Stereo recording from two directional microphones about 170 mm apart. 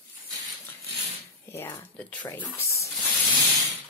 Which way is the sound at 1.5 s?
15° left (ahead or behind).